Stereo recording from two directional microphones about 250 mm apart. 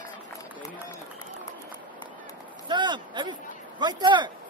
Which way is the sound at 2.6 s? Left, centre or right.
Centre.